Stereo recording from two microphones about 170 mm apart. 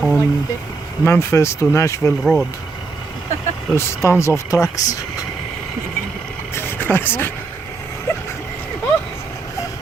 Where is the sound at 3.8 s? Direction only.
15° left (ahead or behind).